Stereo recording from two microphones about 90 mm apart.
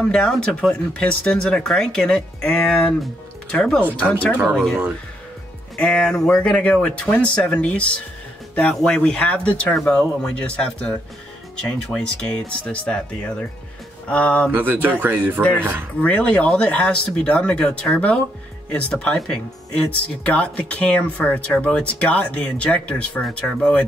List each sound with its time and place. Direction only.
0.0 s speech: 10° left (ahead or behind)
5.8 s speech: 10° left (ahead or behind)
14.5 s speech: 25° right (ahead or behind)
16.0 s speech: 15° left (ahead or behind)